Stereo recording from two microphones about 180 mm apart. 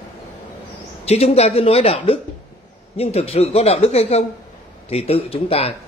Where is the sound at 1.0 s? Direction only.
35° left (ahead or behind).